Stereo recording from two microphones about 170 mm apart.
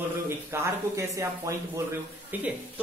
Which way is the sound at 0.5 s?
15° right (ahead or behind).